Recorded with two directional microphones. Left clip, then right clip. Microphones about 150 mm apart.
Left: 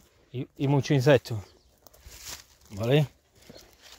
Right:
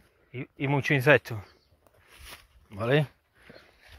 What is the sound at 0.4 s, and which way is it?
Speech, 35° left (ahead or behind).